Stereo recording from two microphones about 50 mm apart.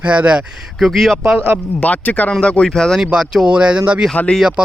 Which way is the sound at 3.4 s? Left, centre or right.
Right.